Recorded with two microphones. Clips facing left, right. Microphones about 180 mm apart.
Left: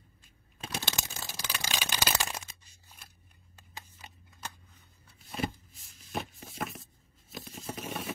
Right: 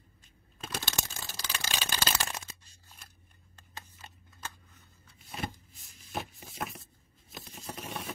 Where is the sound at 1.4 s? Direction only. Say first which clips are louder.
Left 1 dB; 15° left (ahead or behind).